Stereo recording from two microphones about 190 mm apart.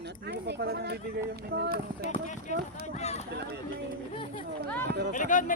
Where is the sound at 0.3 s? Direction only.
60° right (ahead or behind).